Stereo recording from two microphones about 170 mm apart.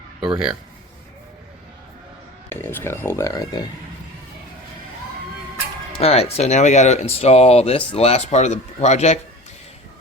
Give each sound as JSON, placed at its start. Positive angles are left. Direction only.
{"t": 0.3, "sound": "speech", "side_deg": -5}
{"t": 2.5, "sound": "speech", "side_deg": 15}
{"t": 6.0, "sound": "speech", "side_deg": 35}